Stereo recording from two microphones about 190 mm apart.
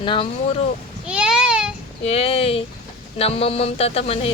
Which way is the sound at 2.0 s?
30° left (ahead or behind).